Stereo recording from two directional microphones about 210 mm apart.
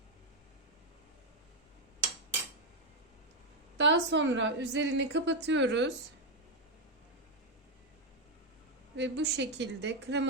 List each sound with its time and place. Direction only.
3.8 s a woman's voice: 60° right (ahead or behind)
9.0 s a woman's voice: 55° right (ahead or behind)